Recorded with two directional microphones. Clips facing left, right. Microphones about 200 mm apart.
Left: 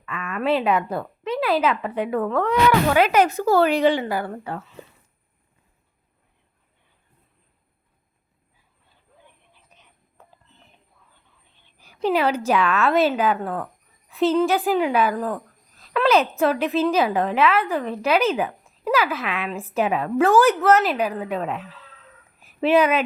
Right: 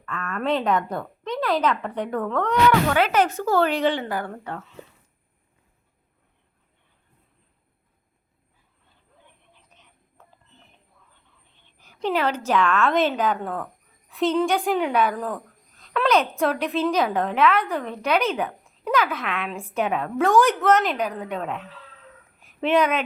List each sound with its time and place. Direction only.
0.0 s a woman's voice: 5° left (ahead or behind)
10.2 s clip-clop: 10° left (ahead or behind)
11.8 s a woman's voice: 10° left (ahead or behind)
15.8 s a sound: 5° left (ahead or behind)
16.4 s a woman's voice: 5° left (ahead or behind)